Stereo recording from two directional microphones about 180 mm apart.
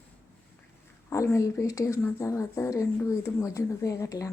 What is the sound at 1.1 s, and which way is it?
A woman's voice, 15° left (ahead or behind).